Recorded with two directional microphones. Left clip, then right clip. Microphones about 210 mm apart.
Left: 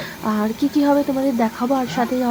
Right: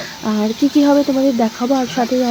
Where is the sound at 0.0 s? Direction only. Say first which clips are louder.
Right 2 dB; 15° right (ahead or behind).